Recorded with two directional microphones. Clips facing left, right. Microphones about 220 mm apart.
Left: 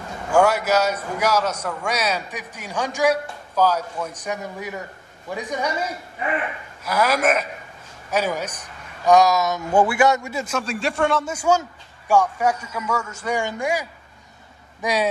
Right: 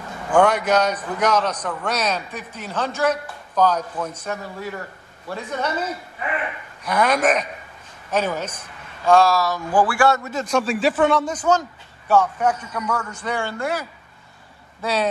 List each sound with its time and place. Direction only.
0.3 s a man's voice: 5° left (ahead or behind)